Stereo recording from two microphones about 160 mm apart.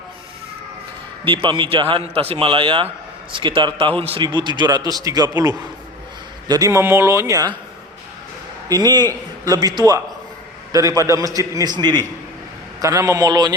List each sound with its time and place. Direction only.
1.2 s a man's voice: 30° right (ahead or behind)
8.7 s a man's voice: 25° right (ahead or behind)